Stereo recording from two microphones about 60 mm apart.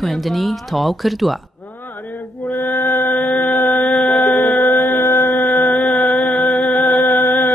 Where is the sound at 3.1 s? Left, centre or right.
Left.